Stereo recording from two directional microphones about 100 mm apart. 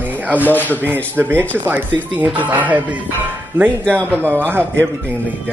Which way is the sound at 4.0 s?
15° left (ahead or behind).